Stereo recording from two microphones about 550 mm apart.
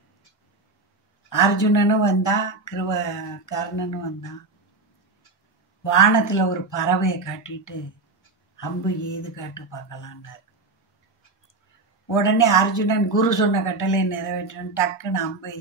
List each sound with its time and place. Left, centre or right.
1.3 s speech: left
5.9 s speech: left
12.1 s speech: left